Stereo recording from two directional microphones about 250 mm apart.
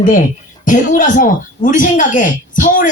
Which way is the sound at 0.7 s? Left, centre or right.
Left.